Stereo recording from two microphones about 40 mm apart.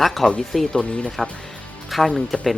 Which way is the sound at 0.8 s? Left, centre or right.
Left.